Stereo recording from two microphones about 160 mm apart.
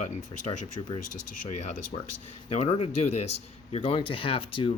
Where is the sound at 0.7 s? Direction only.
25° left (ahead or behind).